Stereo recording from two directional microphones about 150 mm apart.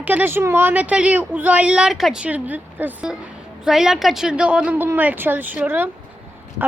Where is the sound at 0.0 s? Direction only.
10° right (ahead or behind).